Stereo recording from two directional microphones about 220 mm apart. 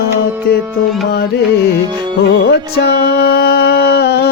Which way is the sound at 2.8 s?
45° left (ahead or behind).